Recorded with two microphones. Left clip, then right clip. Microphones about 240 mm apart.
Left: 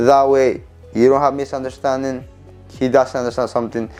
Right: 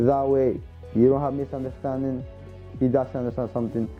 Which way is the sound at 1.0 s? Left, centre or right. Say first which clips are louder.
Left 8 dB; centre.